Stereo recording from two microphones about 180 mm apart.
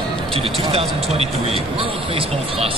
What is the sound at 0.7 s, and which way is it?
Speech, 35° right (ahead or behind).